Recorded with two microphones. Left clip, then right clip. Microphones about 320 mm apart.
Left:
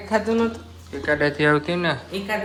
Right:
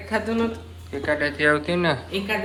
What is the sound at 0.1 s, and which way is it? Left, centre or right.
Speech, left.